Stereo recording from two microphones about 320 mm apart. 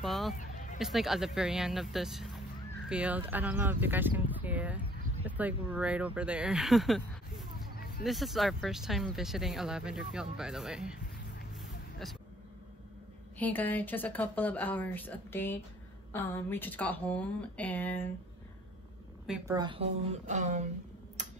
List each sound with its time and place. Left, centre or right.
0.0 s speech: centre
0.4 s a sound: left
0.7 s speech: centre
13.4 s speech: centre
19.2 s a woman's voice: centre; by 20.6 s right
21.2 s tick-tock: right